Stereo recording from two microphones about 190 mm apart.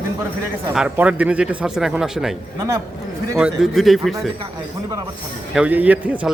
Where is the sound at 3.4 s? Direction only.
5° right (ahead or behind).